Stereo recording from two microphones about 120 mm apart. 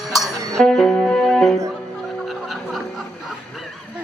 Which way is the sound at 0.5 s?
5° left (ahead or behind).